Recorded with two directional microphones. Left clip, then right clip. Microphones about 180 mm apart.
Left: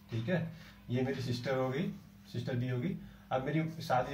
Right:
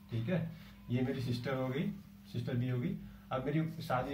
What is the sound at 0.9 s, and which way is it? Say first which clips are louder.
Speech: left 2 dB; centre (ahead or behind).